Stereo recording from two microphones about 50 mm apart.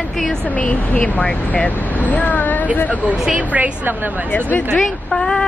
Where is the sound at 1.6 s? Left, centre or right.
Left.